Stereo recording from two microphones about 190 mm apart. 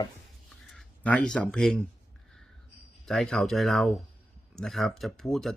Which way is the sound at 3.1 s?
Centre (ahead or behind).